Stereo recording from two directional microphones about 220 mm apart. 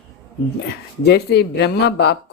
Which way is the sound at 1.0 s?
50° left (ahead or behind).